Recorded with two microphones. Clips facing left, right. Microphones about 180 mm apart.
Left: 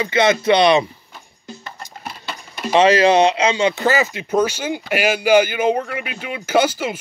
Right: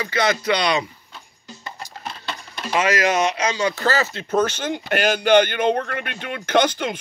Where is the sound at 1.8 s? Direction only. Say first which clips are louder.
Even; 5° left (ahead or behind).